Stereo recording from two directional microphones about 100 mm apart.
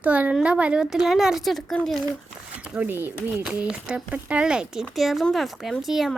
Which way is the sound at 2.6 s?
15° right (ahead or behind).